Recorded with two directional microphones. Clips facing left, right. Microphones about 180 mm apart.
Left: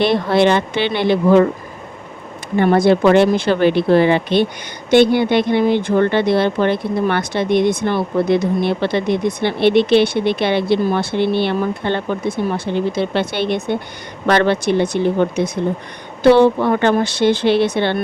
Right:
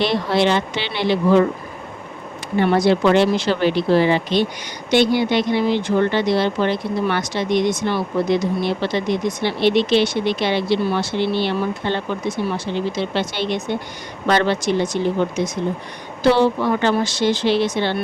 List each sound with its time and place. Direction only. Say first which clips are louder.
0.0 s speech: left 4 dB; 55° left (ahead or behind)
2.6 s speech: left 3 dB; 50° left (ahead or behind)